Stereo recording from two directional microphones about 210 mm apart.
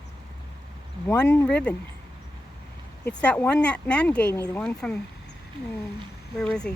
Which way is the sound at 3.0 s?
5° left (ahead or behind).